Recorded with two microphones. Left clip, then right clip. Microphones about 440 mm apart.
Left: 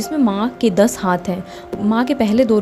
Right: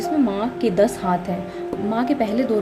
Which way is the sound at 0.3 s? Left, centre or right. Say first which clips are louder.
Left 4 dB; centre.